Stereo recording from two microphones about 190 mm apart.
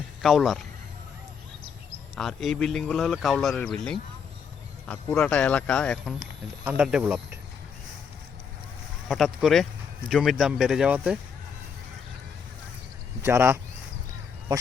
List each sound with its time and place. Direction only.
0.2 s speech: centre (ahead or behind)
2.1 s speech: centre (ahead or behind)
4.9 s speech: 5° left (ahead or behind)
6.7 s speech: 5° right (ahead or behind)
9.0 s speech: centre (ahead or behind)
13.2 s speech: 10° right (ahead or behind)